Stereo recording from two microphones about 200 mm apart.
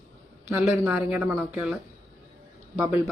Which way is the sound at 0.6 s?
5° right (ahead or behind).